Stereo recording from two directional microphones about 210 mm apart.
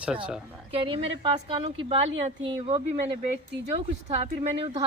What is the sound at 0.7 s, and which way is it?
Speech, 25° right (ahead or behind).